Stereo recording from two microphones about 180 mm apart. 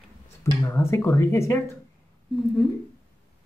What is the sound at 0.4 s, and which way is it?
Speech, 15° left (ahead or behind).